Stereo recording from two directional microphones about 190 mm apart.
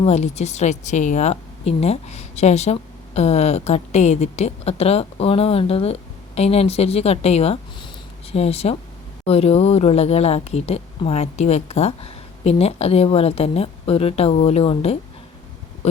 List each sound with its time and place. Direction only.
0.0 s speech: 35° left (ahead or behind)